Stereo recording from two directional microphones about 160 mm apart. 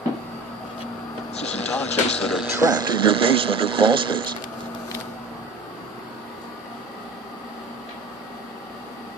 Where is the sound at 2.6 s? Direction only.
25° right (ahead or behind).